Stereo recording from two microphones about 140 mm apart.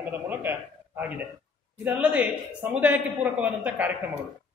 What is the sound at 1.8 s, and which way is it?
A man's voice, 10° right (ahead or behind).